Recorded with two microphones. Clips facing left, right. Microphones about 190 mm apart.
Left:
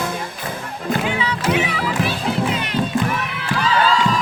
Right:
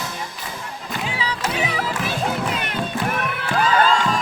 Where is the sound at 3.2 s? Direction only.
50° right (ahead or behind).